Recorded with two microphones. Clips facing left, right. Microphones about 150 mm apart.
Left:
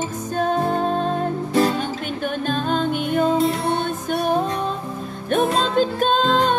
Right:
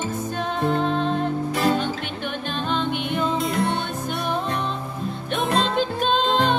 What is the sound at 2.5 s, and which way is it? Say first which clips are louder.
Music: left 3 dB; 45° left (ahead or behind).